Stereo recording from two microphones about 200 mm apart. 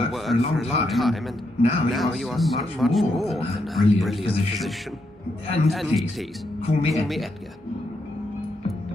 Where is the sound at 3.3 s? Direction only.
30° left (ahead or behind).